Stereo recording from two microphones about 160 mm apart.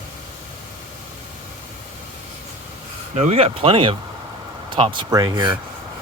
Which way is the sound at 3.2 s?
40° right (ahead or behind).